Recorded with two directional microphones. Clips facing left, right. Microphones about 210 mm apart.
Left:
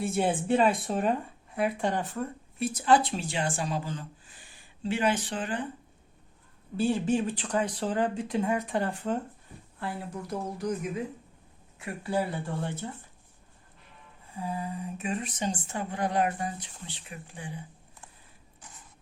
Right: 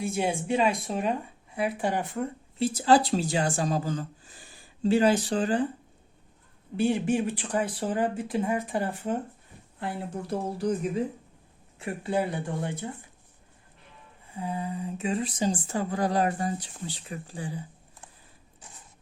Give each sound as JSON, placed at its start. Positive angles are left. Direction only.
{"t": 0.4, "sound": "speech", "side_deg": 0}
{"t": 2.2, "sound": "speech", "side_deg": -30}
{"t": 6.9, "sound": "speech", "side_deg": -10}
{"t": 9.8, "sound": "speech", "side_deg": -25}
{"t": 14.3, "sound": "speech", "side_deg": -25}